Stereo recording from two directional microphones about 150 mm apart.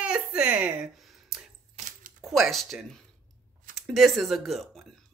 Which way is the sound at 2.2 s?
Centre (ahead or behind).